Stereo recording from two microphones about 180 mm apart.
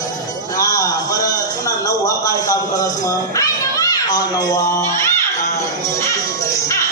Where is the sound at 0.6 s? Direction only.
20° left (ahead or behind).